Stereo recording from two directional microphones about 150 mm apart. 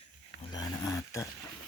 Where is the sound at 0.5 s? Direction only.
25° left (ahead or behind).